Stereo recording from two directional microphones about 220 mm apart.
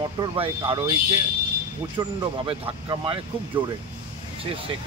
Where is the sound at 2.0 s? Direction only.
20° right (ahead or behind).